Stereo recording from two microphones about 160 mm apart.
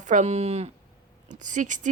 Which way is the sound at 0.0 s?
50° right (ahead or behind).